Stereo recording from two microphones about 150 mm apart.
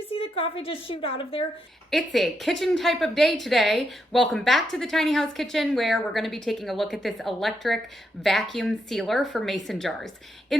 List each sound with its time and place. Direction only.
0.1 s a woman's voice: 40° left (ahead or behind)
1.9 s a woman's voice: centre (ahead or behind)